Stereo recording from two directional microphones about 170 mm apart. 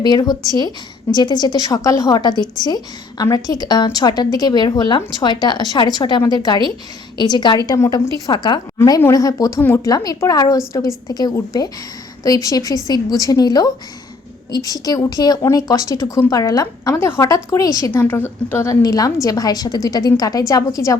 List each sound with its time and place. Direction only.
0.0 s a woman's voice: 25° left (ahead or behind)